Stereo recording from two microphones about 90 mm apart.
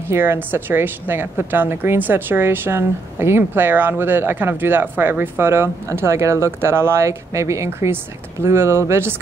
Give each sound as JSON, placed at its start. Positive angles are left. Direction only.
{"t": 0.1, "sound": "a woman's voice", "side_deg": -25}